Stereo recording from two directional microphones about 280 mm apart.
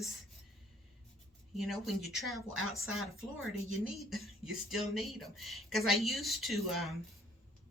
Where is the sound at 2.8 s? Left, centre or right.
Right.